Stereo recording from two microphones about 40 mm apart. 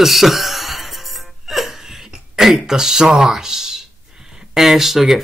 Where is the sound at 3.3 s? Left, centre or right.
Centre.